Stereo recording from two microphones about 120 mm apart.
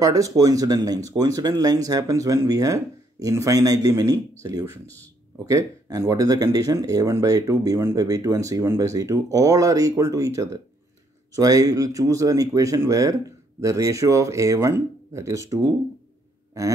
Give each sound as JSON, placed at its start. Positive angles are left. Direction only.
{"t": 0.0, "sound": "speech", "side_deg": -30}
{"t": 4.8, "sound": "speech", "side_deg": 15}
{"t": 5.5, "sound": "speech", "side_deg": -25}